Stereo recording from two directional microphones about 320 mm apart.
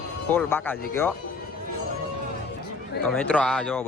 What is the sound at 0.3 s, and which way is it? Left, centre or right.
Speech, centre.